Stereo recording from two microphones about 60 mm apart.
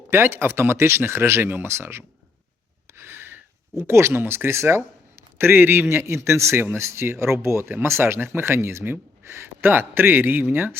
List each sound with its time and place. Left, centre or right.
0.1 s speech: right
2.9 s a sound: right
4.2 s speech: right